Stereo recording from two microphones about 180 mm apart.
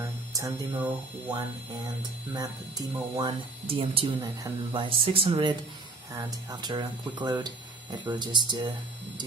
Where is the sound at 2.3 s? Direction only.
20° right (ahead or behind).